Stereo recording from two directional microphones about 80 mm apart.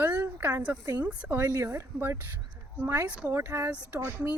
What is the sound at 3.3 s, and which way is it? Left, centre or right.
Speech, right.